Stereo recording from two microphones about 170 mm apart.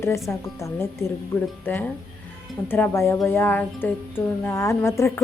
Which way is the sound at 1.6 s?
10° left (ahead or behind).